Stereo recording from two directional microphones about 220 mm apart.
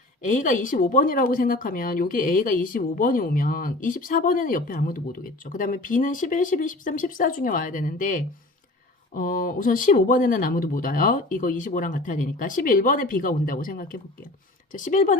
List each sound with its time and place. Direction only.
0.3 s speech: 35° left (ahead or behind)